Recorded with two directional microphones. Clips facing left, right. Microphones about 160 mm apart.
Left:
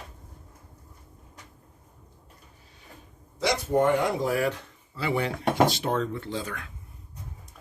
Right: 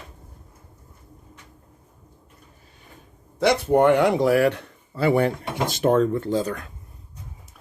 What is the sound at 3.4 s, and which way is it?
Speech, 65° right (ahead or behind).